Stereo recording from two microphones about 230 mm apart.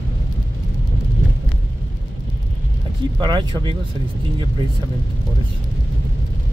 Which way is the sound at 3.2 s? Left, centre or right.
Centre.